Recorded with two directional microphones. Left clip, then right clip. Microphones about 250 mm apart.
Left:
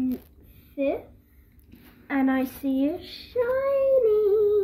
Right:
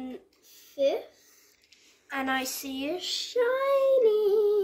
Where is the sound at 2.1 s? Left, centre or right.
Right.